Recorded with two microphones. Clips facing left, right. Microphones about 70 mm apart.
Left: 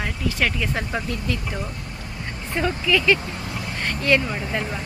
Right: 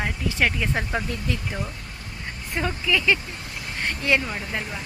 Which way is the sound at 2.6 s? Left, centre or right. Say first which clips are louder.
Left 3 dB; centre.